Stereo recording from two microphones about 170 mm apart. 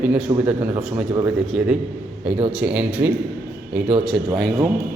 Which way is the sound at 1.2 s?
5° right (ahead or behind).